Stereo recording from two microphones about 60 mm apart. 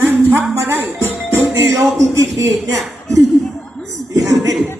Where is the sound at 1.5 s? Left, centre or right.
Right.